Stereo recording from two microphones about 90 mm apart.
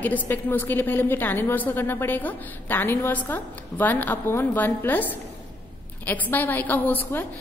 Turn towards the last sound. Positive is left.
turn(degrees=20)  # may be behind; listen again after turning